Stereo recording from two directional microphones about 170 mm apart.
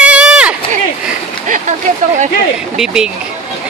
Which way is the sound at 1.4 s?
50° right (ahead or behind).